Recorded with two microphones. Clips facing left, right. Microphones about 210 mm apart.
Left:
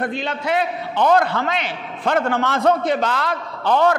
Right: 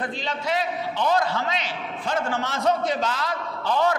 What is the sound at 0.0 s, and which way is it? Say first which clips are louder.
A man's voice: left 5 dB; 60° left (ahead or behind).